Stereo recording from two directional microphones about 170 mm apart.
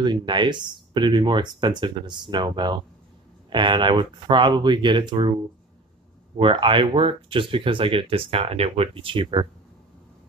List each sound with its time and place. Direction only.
0.0 s speech: 25° right (ahead or behind)
6.3 s speech: 30° right (ahead or behind)